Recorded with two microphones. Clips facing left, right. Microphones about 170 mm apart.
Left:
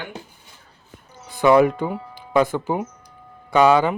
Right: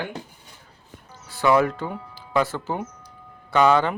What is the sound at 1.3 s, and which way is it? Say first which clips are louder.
Speech: left 5 dB; 20° left (ahead or behind).